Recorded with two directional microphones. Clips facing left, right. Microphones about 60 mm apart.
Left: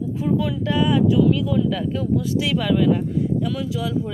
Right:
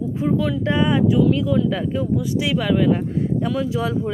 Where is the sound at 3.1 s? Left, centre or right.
Right.